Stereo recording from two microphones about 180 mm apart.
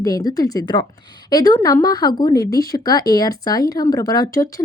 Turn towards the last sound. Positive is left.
turn(degrees=20)  # may be behind; listen again after turning